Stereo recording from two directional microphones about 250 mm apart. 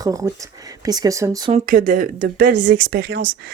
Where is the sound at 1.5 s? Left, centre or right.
Right.